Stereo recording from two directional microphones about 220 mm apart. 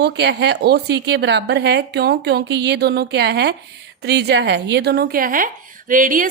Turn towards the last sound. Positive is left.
turn(degrees=-40)  # may be behind; listen again after turning